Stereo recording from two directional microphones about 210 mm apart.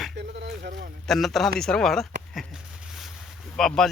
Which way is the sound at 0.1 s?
55° right (ahead or behind).